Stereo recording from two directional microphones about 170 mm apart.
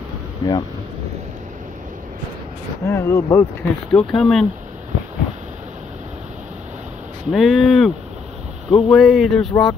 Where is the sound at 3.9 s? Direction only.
Centre (ahead or behind).